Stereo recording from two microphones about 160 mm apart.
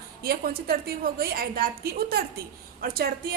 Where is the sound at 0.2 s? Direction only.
70° right (ahead or behind).